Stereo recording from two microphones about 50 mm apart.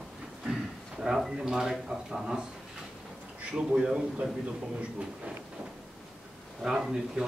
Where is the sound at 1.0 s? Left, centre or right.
Centre.